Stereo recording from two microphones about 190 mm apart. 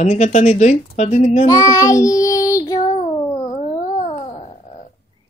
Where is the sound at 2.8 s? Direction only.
30° left (ahead or behind).